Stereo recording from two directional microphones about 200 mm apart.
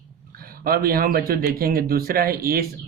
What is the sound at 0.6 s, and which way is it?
Speech, 50° right (ahead or behind).